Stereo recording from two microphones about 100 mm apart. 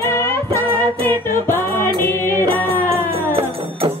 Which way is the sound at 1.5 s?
20° left (ahead or behind).